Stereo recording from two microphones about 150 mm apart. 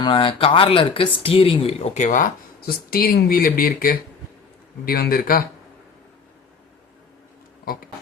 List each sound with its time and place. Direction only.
0.0 s speech: 35° left (ahead or behind); by 2.2 s 50° left (ahead or behind)
2.6 s speech: 80° left
4.9 s speech: 85° left
7.6 s speech: 75° left (ahead or behind)